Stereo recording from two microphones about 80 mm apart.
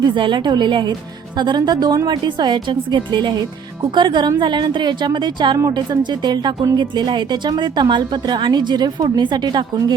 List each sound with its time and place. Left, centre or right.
0.0 s a woman's voice: right
2.0 s a woman's voice: right
5.7 s a woman's voice: right